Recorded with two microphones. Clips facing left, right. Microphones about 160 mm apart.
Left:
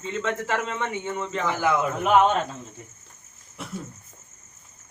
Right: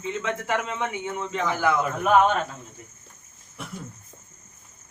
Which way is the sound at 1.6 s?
20° left (ahead or behind).